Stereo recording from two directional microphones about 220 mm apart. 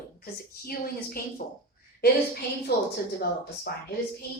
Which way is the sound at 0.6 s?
45° left (ahead or behind).